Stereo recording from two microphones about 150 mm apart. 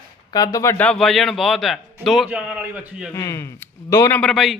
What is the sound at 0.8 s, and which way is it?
A man's voice, centre (ahead or behind).